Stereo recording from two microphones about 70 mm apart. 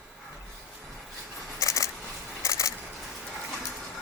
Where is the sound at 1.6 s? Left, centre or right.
Left.